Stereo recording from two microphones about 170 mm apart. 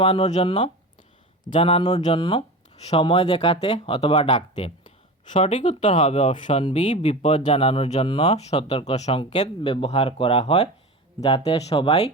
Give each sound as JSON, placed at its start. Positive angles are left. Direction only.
{"t": 0.0, "sound": "speech", "side_deg": 40}